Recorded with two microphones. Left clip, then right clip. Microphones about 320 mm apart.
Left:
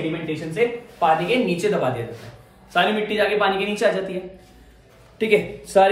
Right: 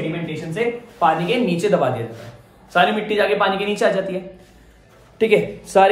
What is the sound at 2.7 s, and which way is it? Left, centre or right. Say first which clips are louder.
Speech: right 3 dB; centre.